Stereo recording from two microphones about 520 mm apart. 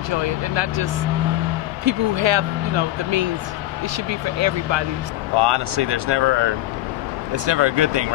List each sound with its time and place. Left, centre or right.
0.1 s speech: right
1.9 s speech: right